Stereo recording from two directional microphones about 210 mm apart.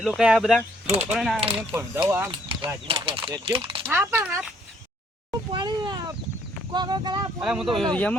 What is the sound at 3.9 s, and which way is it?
Speech, 10° right (ahead or behind).